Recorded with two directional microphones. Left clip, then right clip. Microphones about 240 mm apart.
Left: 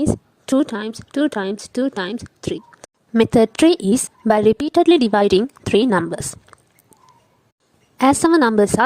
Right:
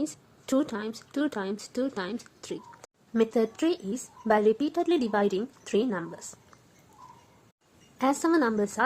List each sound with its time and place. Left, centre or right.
0.0 s speech: left
7.9 s speech: left